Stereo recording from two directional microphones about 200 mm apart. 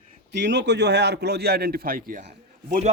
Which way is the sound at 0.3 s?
60° right (ahead or behind).